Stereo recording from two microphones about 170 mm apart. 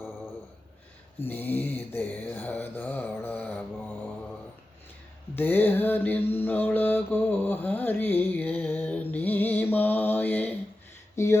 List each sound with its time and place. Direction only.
1.2 s mantra: 10° left (ahead or behind)
5.3 s mantra: 10° left (ahead or behind)